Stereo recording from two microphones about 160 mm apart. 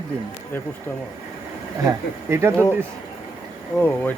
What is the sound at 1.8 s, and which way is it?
Speech, 15° right (ahead or behind).